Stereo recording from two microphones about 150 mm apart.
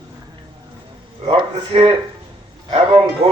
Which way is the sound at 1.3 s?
35° right (ahead or behind).